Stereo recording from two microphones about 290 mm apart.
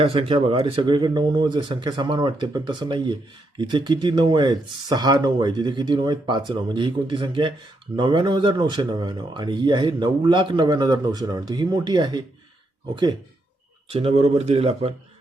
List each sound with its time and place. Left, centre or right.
0.0 s speech: centre
13.9 s speech: right